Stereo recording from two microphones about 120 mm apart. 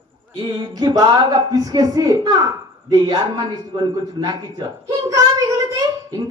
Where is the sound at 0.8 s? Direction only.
35° right (ahead or behind).